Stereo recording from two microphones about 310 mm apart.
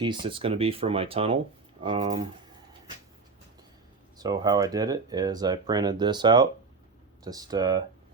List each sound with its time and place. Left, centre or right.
0.0 s speech: centre
4.2 s speech: centre